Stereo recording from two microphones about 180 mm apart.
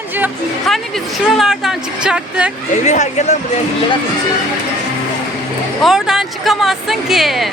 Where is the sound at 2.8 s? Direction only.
40° left (ahead or behind).